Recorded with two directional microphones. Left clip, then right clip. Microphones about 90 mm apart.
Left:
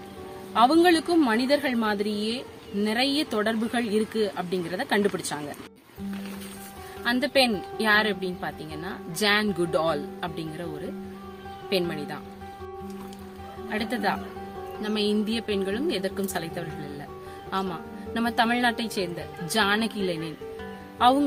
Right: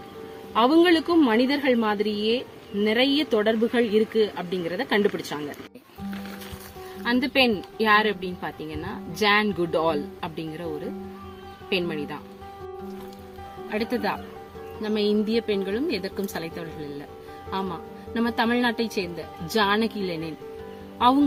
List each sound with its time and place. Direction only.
0.5 s speech: 55° left (ahead or behind)
7.0 s speech: 50° left (ahead or behind)
11.7 s speech: 45° left (ahead or behind)
13.7 s a woman's voice: 40° left (ahead or behind)
17.5 s a woman's voice: 40° left (ahead or behind)